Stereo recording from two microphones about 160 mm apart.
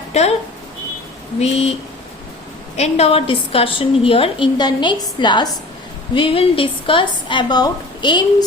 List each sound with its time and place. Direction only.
0.1 s speech: 40° left (ahead or behind)
1.4 s a woman's voice: 40° left (ahead or behind)
2.7 s a woman's voice: 40° left (ahead or behind); by 8.4 s 25° left (ahead or behind)